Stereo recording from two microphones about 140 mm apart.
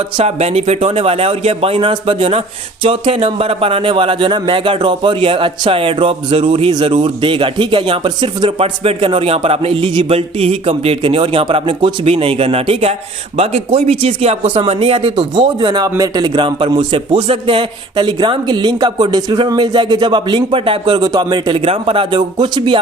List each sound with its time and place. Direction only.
0.2 s speech: 50° right (ahead or behind); by 8.5 s 30° right (ahead or behind)
8.5 s speech: 45° right (ahead or behind)